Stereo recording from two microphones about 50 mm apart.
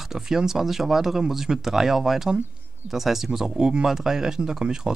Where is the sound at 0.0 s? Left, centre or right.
Centre.